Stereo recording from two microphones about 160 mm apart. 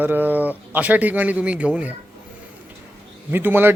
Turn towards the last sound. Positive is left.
turn(degrees=-15)  # may be behind; listen again after turning